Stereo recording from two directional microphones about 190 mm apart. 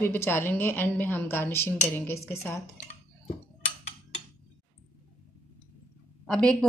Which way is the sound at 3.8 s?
40° left (ahead or behind).